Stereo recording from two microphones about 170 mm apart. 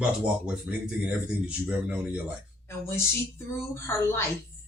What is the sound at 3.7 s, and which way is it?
Speech, 15° left (ahead or behind).